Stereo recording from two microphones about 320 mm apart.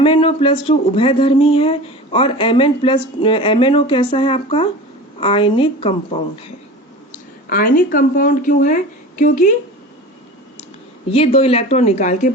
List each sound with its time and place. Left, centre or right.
0.0 s speech: centre
7.5 s a woman's voice: left
11.1 s a woman's voice: centre